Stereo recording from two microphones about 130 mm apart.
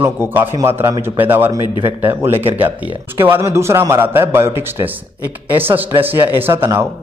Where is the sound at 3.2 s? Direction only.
20° right (ahead or behind).